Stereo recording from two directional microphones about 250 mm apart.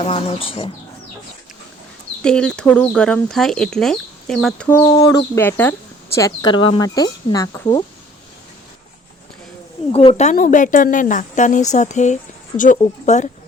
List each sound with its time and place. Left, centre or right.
0.0 s a woman's voice: left
2.2 s speech: centre
4.9 s speech: centre
9.9 s a woman's voice: left